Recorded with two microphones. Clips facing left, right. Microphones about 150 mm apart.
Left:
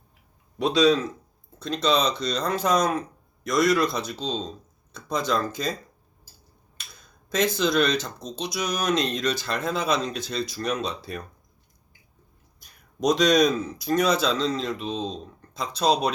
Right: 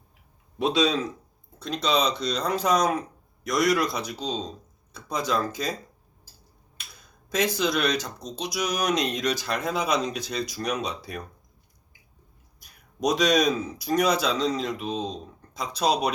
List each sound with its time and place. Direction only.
0.6 s speech: 20° right (ahead or behind)
1.6 s speech: 10° right (ahead or behind)
7.3 s speech: 10° right (ahead or behind)
13.0 s speech: 10° right (ahead or behind)